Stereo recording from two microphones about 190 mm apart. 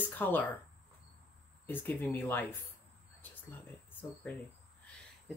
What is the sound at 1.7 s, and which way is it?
Speech, 10° left (ahead or behind).